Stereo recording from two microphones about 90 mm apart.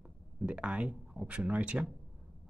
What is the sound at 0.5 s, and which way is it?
Speech, 15° right (ahead or behind).